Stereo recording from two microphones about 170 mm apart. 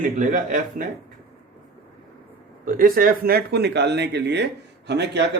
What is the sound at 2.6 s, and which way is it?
Speech, 55° right (ahead or behind).